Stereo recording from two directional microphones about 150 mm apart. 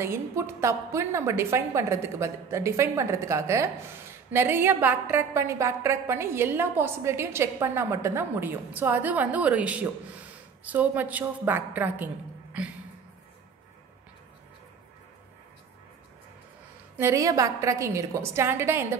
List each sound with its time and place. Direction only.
0.0 s a woman's voice: 20° right (ahead or behind)
16.9 s a woman's voice: 20° right (ahead or behind)